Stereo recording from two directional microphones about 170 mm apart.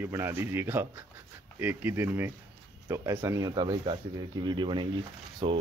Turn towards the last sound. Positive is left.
turn(degrees=-30)  # may be behind; listen again after turning